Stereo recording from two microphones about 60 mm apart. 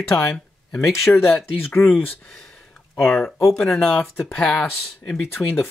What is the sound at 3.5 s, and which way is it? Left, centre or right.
Speech, centre.